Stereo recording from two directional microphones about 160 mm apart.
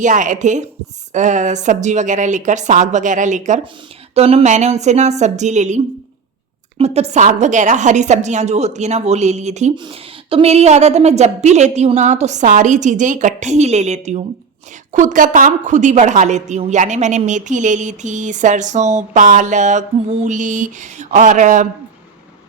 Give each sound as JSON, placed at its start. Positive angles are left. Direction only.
{"t": 0.0, "sound": "a woman's voice", "side_deg": -50}
{"t": 9.7, "sound": "a woman's voice", "side_deg": -30}